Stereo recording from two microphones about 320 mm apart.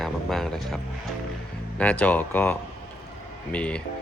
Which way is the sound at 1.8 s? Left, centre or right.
Centre.